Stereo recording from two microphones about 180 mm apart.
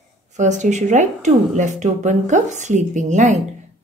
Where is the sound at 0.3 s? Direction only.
40° right (ahead or behind).